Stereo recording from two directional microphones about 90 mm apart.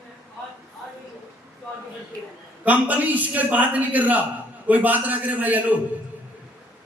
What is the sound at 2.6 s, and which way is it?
A man's voice, 20° right (ahead or behind).